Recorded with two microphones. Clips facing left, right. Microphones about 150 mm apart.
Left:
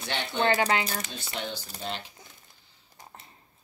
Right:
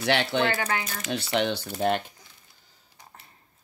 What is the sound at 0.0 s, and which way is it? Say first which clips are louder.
Speech: right 5 dB; 75° right (ahead or behind).